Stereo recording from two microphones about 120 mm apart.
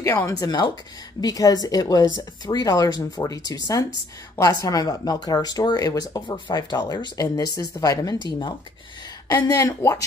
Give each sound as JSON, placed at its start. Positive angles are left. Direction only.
{"t": 0.0, "sound": "speech", "side_deg": 20}
{"t": 0.3, "sound": "speech", "side_deg": 35}
{"t": 9.3, "sound": "speech", "side_deg": 30}